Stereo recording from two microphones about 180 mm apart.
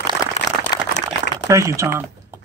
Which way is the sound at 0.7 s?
20° left (ahead or behind).